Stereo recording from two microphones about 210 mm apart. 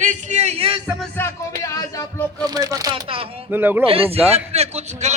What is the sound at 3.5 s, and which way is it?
Speech, 10° right (ahead or behind).